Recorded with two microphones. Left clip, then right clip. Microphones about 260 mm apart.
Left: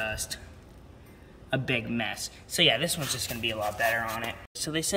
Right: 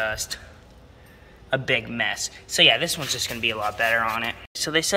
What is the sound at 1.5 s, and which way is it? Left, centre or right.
A man's voice, centre.